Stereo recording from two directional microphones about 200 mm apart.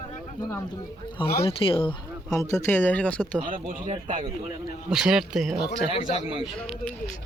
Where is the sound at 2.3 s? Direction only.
15° left (ahead or behind).